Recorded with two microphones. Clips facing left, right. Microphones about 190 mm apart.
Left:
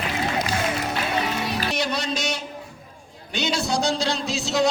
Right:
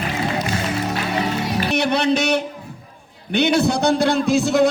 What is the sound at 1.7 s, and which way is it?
A man's voice, 60° right (ahead or behind).